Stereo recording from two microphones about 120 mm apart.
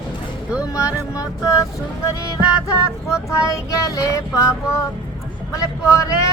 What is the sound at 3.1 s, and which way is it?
Child singing, 25° left (ahead or behind).